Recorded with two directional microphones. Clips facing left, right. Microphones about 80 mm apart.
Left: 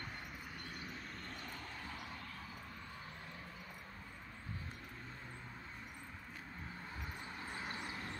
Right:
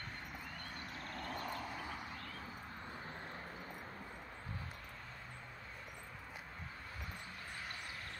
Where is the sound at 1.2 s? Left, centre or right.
Right.